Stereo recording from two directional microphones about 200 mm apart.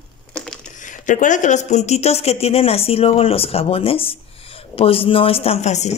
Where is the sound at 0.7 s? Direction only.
40° left (ahead or behind).